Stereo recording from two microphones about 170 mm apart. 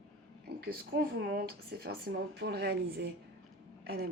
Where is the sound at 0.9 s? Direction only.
65° right (ahead or behind).